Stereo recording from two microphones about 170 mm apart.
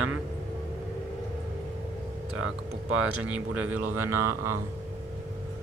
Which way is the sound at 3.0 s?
10° right (ahead or behind).